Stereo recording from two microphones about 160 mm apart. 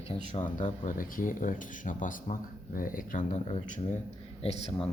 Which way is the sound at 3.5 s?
45° left (ahead or behind).